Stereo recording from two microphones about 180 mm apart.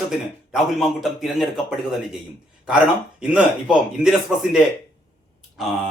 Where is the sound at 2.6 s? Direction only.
5° right (ahead or behind).